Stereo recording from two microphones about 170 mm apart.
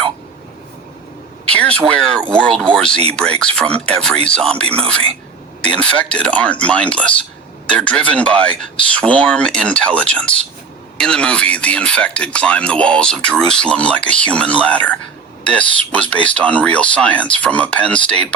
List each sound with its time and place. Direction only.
1.5 s speech: 5° left (ahead or behind)
4.6 s a man's voice: 35° right (ahead or behind)
5.6 s speech: 5° left (ahead or behind)